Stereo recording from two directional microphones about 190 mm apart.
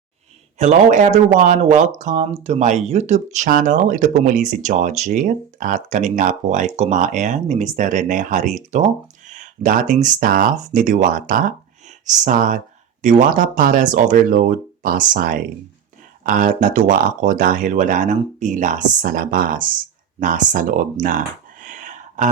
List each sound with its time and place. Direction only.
0.6 s speech: 40° right (ahead or behind)